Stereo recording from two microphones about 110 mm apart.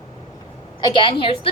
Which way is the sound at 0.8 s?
45° left (ahead or behind).